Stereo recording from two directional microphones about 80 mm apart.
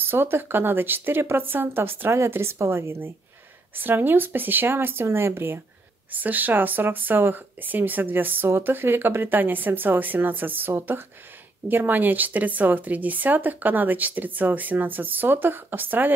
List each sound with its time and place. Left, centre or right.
0.0 s speech: right